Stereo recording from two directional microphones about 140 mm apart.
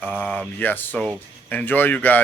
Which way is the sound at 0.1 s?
10° left (ahead or behind).